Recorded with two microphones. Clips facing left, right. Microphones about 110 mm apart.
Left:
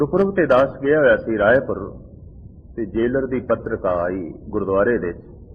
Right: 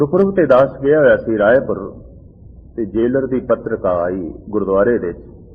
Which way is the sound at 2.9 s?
25° right (ahead or behind).